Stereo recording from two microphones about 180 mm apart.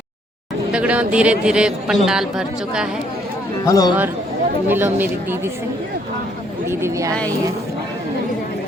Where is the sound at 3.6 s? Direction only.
20° left (ahead or behind).